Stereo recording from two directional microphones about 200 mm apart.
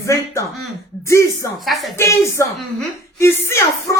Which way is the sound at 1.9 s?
15° left (ahead or behind).